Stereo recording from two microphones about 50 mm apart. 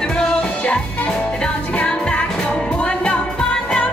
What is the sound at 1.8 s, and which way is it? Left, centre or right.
Music, left.